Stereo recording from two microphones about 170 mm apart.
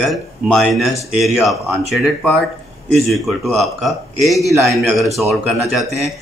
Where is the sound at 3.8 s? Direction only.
Centre (ahead or behind).